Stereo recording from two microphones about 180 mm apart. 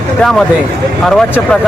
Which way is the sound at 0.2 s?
Centre (ahead or behind).